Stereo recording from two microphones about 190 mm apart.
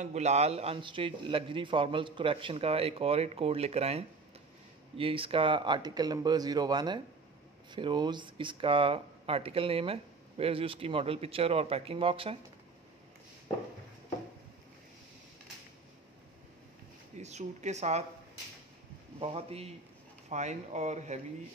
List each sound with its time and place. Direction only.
0.0 s a man's voice: 35° right (ahead or behind)
17.2 s a man's voice: 35° right (ahead or behind)
19.1 s a man's voice: 30° right (ahead or behind)